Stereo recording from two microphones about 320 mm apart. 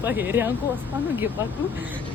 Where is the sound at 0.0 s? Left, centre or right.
Centre.